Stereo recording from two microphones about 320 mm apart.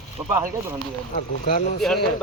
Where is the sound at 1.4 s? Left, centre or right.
Left.